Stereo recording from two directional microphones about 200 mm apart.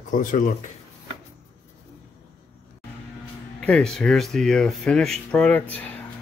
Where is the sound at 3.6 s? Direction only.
5° left (ahead or behind).